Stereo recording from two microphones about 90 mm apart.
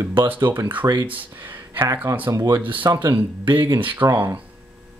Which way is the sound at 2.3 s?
50° right (ahead or behind).